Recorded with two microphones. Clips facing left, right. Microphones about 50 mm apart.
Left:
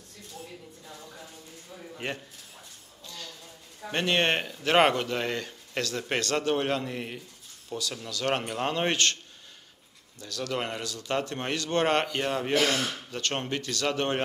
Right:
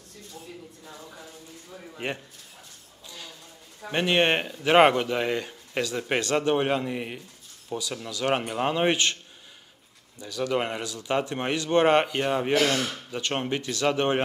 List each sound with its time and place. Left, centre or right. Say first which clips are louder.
2.0 s speech: right 2 dB; right
3.1 s a sound: even; centre
3.8 s speech: right 3 dB; centre